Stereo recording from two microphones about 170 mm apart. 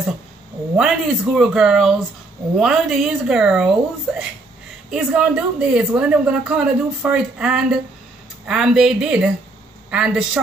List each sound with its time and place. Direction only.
0.7 s a woman's voice: 5° right (ahead or behind)